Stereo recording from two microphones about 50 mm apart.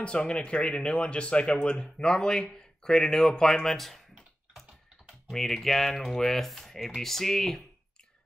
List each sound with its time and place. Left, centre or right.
0.0 s speech: left